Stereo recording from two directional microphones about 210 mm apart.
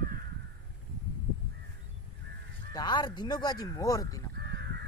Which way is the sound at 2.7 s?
20° left (ahead or behind).